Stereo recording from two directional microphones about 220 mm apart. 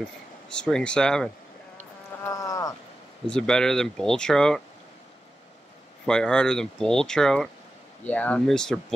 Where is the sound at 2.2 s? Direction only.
15° left (ahead or behind).